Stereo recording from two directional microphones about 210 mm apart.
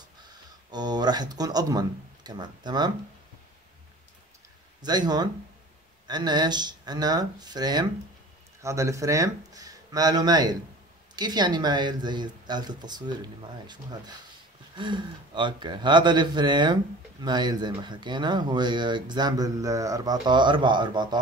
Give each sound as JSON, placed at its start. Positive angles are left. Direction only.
{"t": 0.2, "sound": "speech", "side_deg": -20}
{"t": 4.8, "sound": "speech", "side_deg": -20}